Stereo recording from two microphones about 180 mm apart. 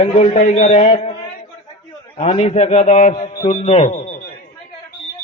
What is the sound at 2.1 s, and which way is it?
A man's voice, 35° left (ahead or behind).